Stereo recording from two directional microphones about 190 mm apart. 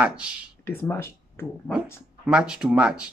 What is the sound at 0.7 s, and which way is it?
Speech, 10° left (ahead or behind).